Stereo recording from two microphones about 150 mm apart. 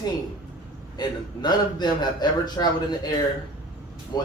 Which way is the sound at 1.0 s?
30° left (ahead or behind).